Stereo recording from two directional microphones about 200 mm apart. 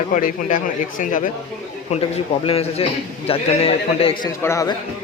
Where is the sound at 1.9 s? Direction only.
30° left (ahead or behind).